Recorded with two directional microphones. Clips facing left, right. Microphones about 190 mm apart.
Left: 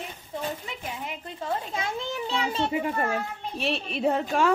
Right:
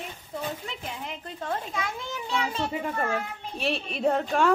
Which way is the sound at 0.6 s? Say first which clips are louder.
Left 1 dB; centre (ahead or behind).